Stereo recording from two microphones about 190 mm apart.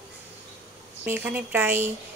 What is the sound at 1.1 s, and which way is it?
Speech, 10° right (ahead or behind).